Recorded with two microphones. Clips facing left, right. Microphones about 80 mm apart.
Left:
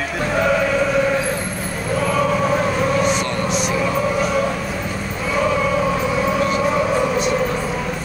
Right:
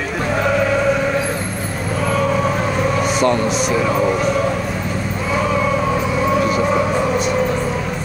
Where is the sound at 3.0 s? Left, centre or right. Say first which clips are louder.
Right 3 dB; centre.